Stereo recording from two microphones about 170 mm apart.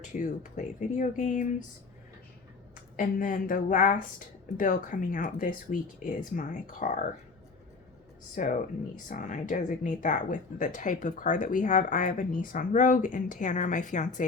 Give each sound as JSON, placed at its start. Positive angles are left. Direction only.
{"t": 0.0, "sound": "speech", "side_deg": 45}
{"t": 2.9, "sound": "speech", "side_deg": 55}
{"t": 8.4, "sound": "speech", "side_deg": 50}